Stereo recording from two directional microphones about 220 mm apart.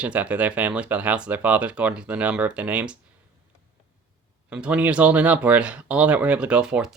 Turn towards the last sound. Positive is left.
turn(degrees=-5)  # may be behind; listen again after turning